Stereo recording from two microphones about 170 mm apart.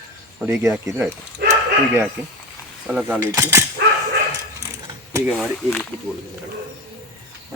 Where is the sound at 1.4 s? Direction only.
75° right (ahead or behind).